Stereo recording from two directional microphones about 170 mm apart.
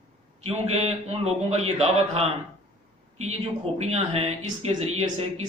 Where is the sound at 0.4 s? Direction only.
35° right (ahead or behind).